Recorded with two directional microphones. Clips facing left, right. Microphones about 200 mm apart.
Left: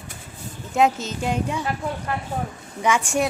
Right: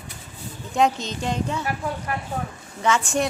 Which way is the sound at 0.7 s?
5° left (ahead or behind).